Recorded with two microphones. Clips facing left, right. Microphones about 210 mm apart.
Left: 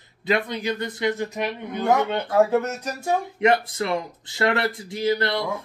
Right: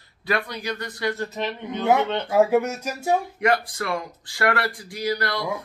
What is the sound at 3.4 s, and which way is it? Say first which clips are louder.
Speech: left 2 dB; 25° left (ahead or behind).